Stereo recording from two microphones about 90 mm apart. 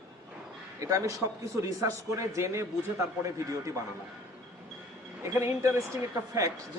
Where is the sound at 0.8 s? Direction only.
35° right (ahead or behind).